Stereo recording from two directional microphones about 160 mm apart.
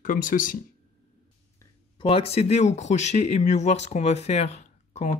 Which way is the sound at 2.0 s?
35° left (ahead or behind).